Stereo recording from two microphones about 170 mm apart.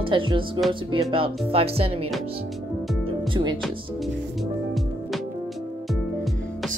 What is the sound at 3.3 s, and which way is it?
Speech, 25° right (ahead or behind).